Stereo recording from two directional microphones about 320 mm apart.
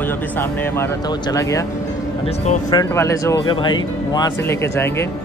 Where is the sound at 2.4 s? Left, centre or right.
Left.